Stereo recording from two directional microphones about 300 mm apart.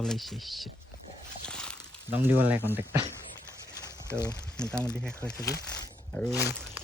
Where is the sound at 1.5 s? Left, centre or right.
Centre.